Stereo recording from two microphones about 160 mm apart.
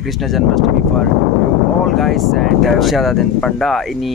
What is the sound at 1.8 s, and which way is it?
Speech, centre (ahead or behind).